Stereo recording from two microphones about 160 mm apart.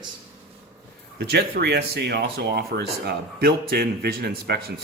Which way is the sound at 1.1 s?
75° right (ahead or behind).